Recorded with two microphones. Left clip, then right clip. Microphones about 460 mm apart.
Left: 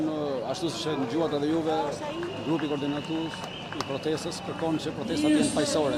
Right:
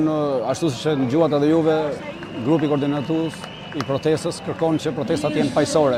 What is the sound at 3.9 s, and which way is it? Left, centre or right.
A man's voice, right.